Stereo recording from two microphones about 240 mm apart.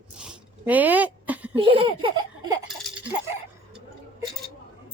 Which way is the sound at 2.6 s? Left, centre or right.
Centre.